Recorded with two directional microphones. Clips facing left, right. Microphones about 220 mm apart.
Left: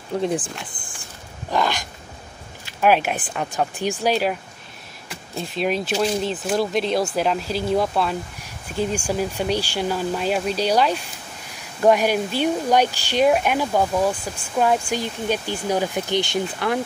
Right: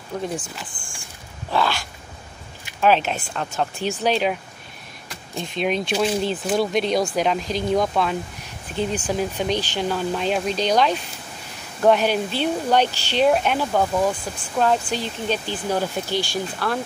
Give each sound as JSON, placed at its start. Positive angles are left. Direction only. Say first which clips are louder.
{"t": 0.1, "sound": "speech", "louder": "left 5 dB", "side_deg": 30}
{"t": 1.5, "sound": "dog", "louder": "even", "side_deg": 15}
{"t": 2.8, "sound": "speech", "louder": "even", "side_deg": 10}